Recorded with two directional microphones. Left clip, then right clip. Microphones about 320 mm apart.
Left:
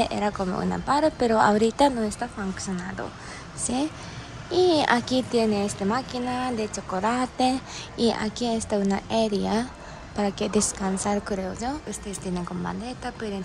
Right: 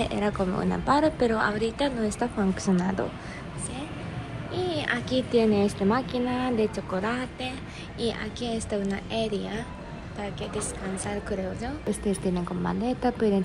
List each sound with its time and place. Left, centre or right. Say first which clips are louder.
0.0 s a woman's voice: left 2 dB; centre
4.5 s a child's voice: left 8 dB; centre
11.9 s a woman's voice: right 5 dB; centre